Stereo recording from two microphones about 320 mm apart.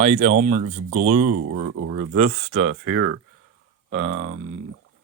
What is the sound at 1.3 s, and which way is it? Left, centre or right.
Speech, right.